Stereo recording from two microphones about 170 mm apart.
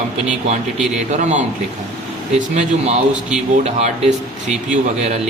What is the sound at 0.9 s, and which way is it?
Speech, 45° right (ahead or behind).